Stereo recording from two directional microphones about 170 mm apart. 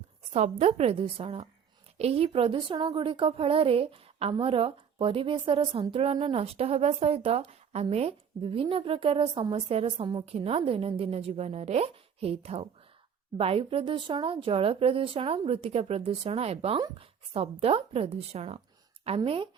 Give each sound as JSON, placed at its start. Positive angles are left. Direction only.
{"t": 0.3, "sound": "speech", "side_deg": -40}